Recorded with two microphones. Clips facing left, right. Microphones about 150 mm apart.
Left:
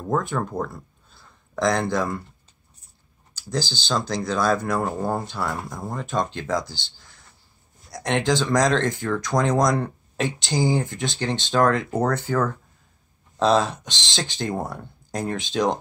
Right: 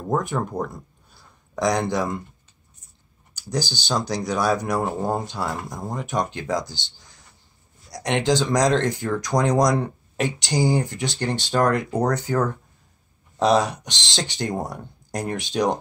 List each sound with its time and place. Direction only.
0.0 s speech: 15° right (ahead or behind)
3.3 s speech: 15° right (ahead or behind)